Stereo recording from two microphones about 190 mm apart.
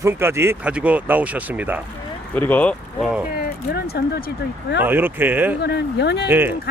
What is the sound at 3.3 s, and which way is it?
Speech, 55° left (ahead or behind).